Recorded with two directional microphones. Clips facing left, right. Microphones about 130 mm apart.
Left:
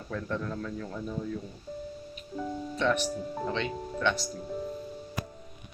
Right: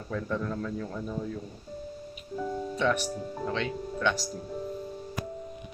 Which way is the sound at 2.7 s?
10° right (ahead or behind).